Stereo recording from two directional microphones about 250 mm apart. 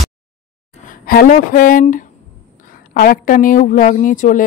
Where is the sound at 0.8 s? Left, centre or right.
Left.